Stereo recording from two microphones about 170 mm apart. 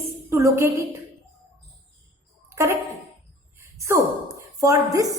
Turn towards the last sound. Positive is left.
turn(degrees=-20)  # may be behind; listen again after turning